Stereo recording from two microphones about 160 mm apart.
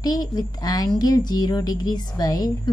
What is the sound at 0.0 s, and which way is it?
A woman's voice, 25° left (ahead or behind).